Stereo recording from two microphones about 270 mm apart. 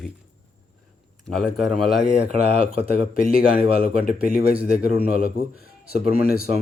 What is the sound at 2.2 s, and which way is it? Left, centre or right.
Speech, right.